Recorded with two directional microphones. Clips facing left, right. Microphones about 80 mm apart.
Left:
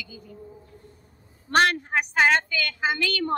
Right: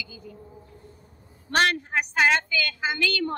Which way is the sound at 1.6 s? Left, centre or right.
Left.